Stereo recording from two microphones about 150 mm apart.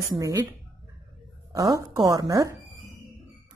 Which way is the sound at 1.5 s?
25° right (ahead or behind).